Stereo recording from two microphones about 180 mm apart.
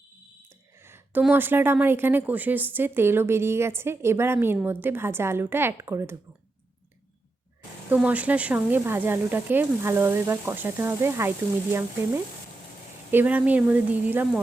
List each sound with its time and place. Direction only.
0.9 s a woman's voice: 10° right (ahead or behind)
7.9 s a woman's voice: 10° right (ahead or behind)
13.1 s a woman's voice: 10° right (ahead or behind)